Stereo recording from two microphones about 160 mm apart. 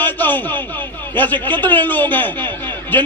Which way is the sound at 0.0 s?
10° left (ahead or behind).